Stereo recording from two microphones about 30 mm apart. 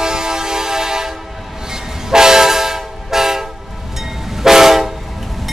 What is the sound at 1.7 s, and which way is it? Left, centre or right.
Train, centre.